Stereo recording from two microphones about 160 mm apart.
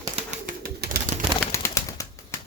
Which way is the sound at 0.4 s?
65° right (ahead or behind).